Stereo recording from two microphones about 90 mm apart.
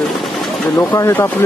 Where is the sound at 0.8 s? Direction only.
30° left (ahead or behind).